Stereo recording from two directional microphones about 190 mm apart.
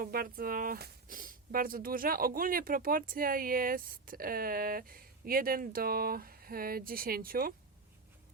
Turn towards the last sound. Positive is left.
turn(degrees=-50)  # may be behind; listen again after turning